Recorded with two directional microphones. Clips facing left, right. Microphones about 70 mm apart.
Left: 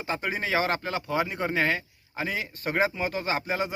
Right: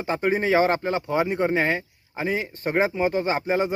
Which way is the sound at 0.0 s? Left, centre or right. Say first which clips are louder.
Right 7 dB; right.